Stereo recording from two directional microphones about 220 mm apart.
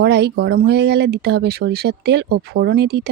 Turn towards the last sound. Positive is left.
turn(degrees=-45)  # may be behind; listen again after turning